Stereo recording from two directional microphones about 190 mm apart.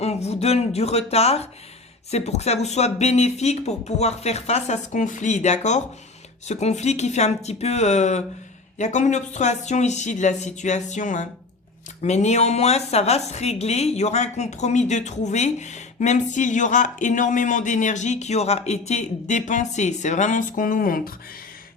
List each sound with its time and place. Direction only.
0.0 s a woman's voice: 35° left (ahead or behind)